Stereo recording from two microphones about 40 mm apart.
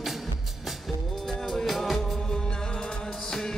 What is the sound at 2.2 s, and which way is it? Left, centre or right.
Music, centre.